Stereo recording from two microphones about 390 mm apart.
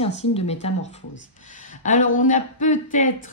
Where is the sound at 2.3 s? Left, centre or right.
Centre.